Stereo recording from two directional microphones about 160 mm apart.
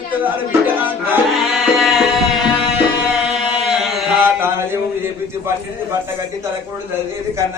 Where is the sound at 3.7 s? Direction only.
Centre (ahead or behind).